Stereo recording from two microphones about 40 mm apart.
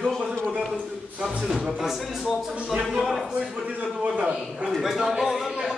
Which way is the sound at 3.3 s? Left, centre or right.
Right.